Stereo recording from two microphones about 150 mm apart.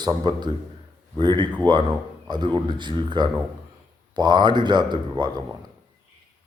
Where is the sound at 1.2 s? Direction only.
30° right (ahead or behind).